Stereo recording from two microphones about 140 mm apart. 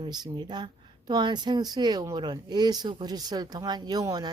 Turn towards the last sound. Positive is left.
turn(degrees=-30)  # may be behind; listen again after turning